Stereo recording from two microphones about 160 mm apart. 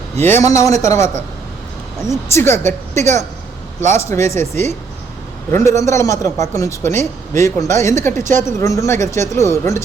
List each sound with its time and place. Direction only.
0.2 s speech: 15° left (ahead or behind)
2.3 s a man's voice: 15° left (ahead or behind)
8.1 s a woman's voice: 50° right (ahead or behind)
8.4 s speech: 20° left (ahead or behind)